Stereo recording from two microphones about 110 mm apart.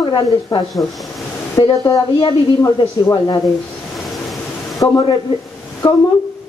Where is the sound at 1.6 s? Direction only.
40° left (ahead or behind).